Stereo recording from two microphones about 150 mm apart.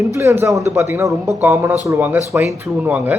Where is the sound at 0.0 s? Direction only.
20° right (ahead or behind).